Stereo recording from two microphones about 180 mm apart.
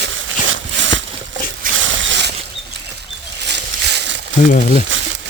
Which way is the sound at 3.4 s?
70° right (ahead or behind).